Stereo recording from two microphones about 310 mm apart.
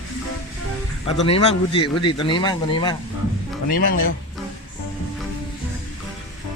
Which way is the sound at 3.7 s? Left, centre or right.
Left.